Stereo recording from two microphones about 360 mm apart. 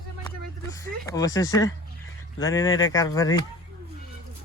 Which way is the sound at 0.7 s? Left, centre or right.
Centre.